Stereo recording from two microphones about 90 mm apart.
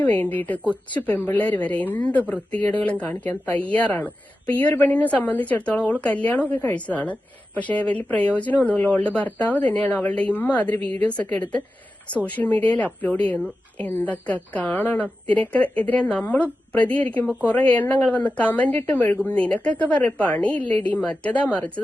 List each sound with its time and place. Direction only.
0.0 s a woman's voice: 20° left (ahead or behind)